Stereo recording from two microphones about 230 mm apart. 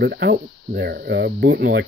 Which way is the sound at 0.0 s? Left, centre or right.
Right.